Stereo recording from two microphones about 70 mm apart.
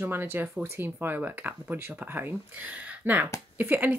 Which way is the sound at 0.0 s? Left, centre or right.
Right.